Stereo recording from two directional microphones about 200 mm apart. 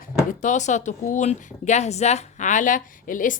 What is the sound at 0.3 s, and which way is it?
Speech, 40° left (ahead or behind).